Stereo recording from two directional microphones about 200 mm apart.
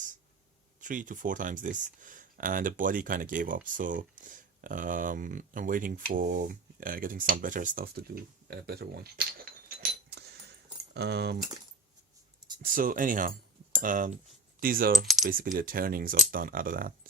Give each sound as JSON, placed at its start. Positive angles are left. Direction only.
{"t": 0.8, "sound": "speech", "side_deg": -40}
{"t": 12.6, "sound": "speech", "side_deg": -45}
{"t": 15.0, "sound": "coin", "side_deg": 0}
{"t": 15.5, "sound": "speech", "side_deg": -45}